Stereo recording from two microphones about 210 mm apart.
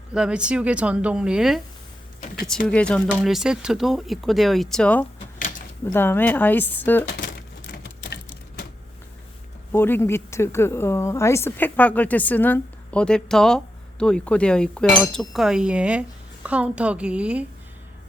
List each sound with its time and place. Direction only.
0.1 s speech: 5° right (ahead or behind)
2.6 s speech: 5° left (ahead or behind)
7.1 s a sound: 45° left (ahead or behind)
9.7 s speech: 10° left (ahead or behind); by 17.4 s 5° right (ahead or behind)